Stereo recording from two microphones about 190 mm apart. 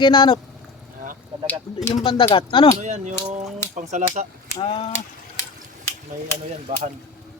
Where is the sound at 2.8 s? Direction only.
40° right (ahead or behind).